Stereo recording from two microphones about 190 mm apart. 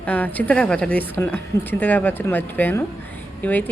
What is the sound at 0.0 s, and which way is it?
A woman's voice, 10° left (ahead or behind).